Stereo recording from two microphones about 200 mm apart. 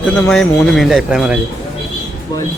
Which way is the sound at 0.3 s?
Centre (ahead or behind).